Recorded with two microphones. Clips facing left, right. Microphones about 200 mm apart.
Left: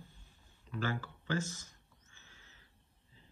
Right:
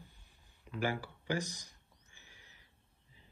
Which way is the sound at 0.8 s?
15° right (ahead or behind).